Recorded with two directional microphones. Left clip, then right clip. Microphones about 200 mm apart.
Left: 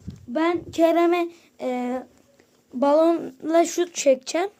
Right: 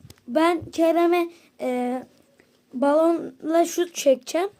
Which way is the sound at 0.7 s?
5° left (ahead or behind).